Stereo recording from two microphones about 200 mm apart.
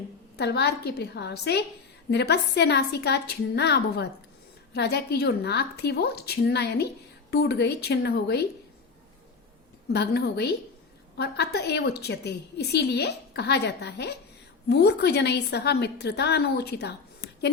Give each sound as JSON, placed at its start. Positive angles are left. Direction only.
{"t": 0.3, "sound": "a woman's voice", "side_deg": 55}
{"t": 9.9, "sound": "a woman's voice", "side_deg": 55}